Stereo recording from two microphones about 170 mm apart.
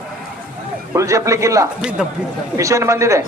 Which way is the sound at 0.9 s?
20° right (ahead or behind).